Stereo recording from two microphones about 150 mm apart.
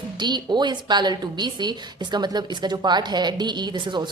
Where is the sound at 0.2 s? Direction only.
30° right (ahead or behind).